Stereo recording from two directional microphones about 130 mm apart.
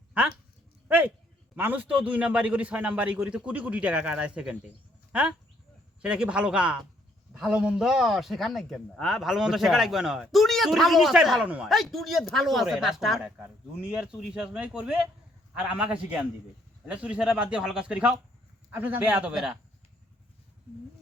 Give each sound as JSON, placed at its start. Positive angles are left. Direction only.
{"t": 0.9, "sound": "a man's voice", "side_deg": -10}